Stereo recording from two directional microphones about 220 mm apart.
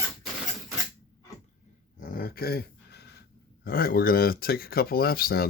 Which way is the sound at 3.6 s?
40° left (ahead or behind).